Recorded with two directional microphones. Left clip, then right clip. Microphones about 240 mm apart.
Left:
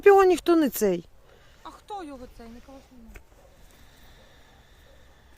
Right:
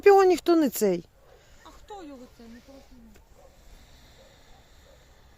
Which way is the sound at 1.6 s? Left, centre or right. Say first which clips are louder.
Left 6 dB; left.